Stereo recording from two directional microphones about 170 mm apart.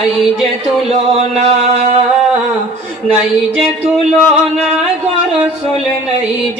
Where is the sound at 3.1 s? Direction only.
5° right (ahead or behind).